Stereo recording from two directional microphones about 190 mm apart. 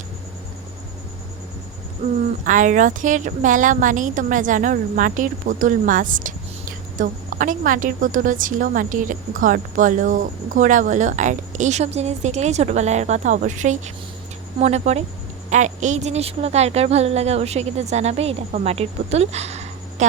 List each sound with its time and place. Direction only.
2.4 s a woman's voice: 40° right (ahead or behind)